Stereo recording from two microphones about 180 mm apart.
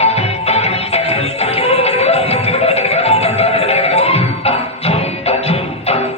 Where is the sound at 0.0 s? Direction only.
35° left (ahead or behind).